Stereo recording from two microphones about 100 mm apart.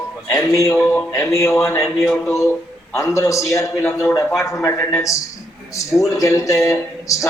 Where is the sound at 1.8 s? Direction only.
Centre (ahead or behind).